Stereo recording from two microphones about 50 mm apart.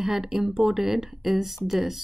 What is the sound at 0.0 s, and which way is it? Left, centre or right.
Speech, centre.